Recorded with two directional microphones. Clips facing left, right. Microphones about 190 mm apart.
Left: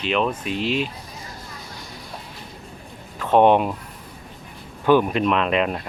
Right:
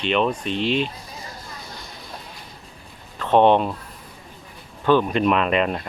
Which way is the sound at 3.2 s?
10° left (ahead or behind).